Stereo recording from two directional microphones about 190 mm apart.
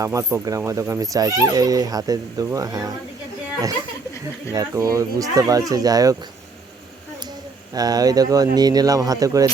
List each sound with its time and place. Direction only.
0.0 s speech: 15° right (ahead or behind)
4.5 s speech: 15° right (ahead or behind)
7.7 s speech: 20° right (ahead or behind)